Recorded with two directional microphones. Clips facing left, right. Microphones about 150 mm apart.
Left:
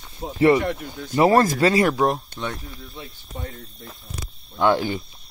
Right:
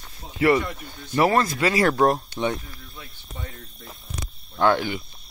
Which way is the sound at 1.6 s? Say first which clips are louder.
Left 3 dB; 30° left (ahead or behind).